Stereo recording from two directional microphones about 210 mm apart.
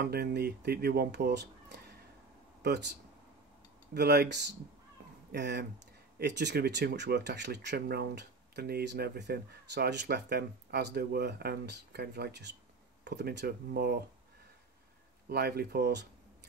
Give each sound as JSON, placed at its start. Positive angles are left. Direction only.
{"t": 0.0, "sound": "speech", "side_deg": -50}
{"t": 15.2, "sound": "speech", "side_deg": -50}